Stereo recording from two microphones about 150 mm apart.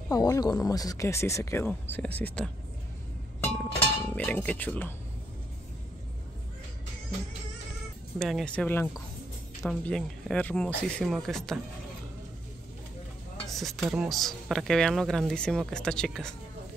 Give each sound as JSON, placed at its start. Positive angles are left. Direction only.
{"t": 0.1, "sound": "speech", "side_deg": 25}
{"t": 3.8, "sound": "speech", "side_deg": 10}
{"t": 8.2, "sound": "speech", "side_deg": 0}
{"t": 13.5, "sound": "speech", "side_deg": 0}